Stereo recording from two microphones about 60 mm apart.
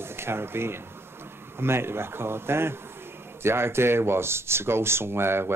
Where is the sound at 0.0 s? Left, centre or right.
Right.